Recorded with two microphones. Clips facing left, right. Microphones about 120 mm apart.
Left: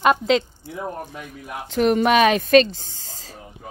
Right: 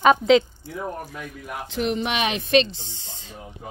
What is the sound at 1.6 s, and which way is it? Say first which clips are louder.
Speech: left 8 dB; 45° left (ahead or behind).